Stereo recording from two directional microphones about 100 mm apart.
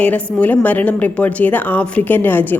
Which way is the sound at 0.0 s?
15° left (ahead or behind).